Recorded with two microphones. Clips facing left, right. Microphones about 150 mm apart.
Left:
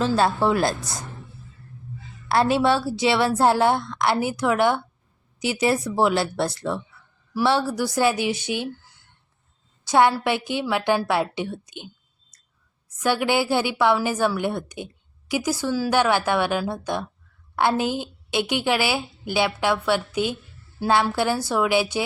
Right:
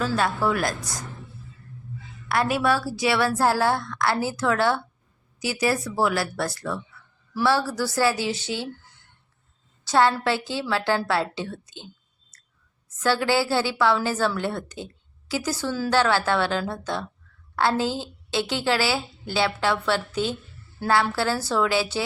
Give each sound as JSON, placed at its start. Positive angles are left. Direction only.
{"t": 0.0, "sound": "a woman's voice", "side_deg": 25}
{"t": 2.3, "sound": "a woman's voice", "side_deg": 30}
{"t": 9.8, "sound": "a woman's voice", "side_deg": 15}
{"t": 12.3, "sound": "a sound", "side_deg": 15}
{"t": 13.0, "sound": "a woman's voice", "side_deg": 15}